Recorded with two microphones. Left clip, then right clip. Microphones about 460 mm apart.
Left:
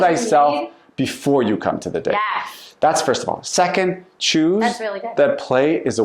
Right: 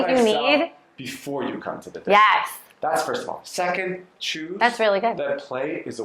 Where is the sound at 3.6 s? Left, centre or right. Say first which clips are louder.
Left 7 dB; left.